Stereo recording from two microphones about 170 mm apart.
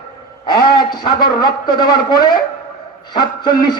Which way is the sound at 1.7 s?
25° left (ahead or behind).